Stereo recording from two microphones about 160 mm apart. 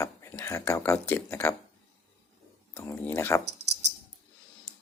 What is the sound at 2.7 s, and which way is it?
Speech, 10° left (ahead or behind).